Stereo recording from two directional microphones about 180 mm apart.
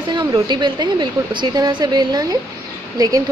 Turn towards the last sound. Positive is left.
turn(degrees=-20)  # may be behind; listen again after turning